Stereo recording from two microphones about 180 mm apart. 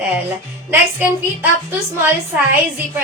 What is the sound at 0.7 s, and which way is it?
Speech, 10° right (ahead or behind).